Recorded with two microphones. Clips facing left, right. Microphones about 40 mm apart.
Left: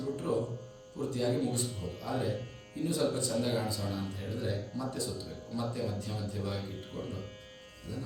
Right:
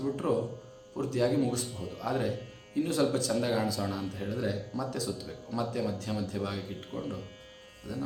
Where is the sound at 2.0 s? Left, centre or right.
Right.